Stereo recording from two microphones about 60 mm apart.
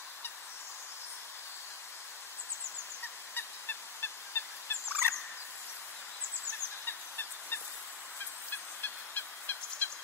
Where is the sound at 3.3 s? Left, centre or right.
Left.